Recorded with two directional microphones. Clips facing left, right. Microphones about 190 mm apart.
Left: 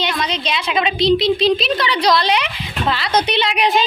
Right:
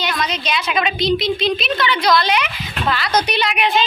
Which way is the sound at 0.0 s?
25° left (ahead or behind).